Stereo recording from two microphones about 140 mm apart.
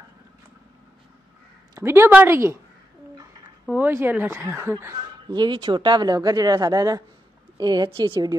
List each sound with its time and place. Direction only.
1.8 s speech: 15° right (ahead or behind)
3.7 s speech: 15° right (ahead or behind)
4.9 s speech: 30° right (ahead or behind)